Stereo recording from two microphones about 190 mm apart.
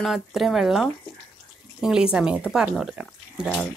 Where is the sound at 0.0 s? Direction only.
Centre (ahead or behind).